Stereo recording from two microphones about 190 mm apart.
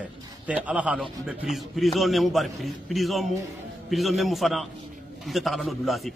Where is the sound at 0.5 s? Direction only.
5° right (ahead or behind).